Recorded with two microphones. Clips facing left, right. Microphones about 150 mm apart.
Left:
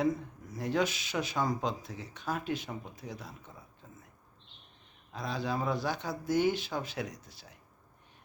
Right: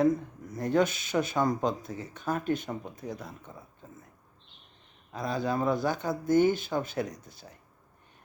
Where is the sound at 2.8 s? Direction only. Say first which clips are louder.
Right 5 dB; 50° right (ahead or behind).